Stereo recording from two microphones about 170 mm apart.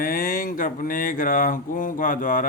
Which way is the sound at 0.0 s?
55° left (ahead or behind).